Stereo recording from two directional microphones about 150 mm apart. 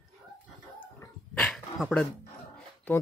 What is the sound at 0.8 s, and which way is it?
Dog, 10° left (ahead or behind).